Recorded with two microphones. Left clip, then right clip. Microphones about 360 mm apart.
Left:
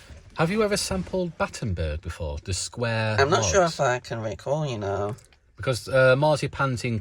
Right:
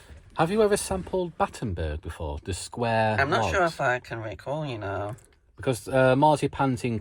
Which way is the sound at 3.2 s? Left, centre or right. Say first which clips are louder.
Left 3 dB; centre.